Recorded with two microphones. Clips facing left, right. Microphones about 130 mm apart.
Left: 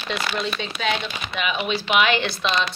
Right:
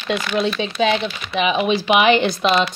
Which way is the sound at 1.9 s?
15° right (ahead or behind).